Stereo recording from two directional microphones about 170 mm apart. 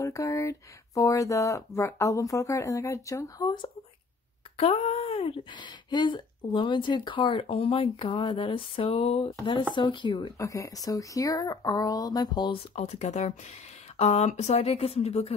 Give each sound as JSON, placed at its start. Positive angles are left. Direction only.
{"t": 0.0, "sound": "speech", "side_deg": 20}
{"t": 4.6, "sound": "speech", "side_deg": 35}
{"t": 12.7, "sound": "speech", "side_deg": 40}